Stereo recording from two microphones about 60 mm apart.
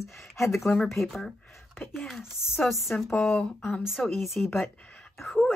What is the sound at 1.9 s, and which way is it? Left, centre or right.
Speech, centre.